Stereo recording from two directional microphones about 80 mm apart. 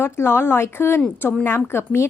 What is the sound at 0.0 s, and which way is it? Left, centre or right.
A woman's voice, left.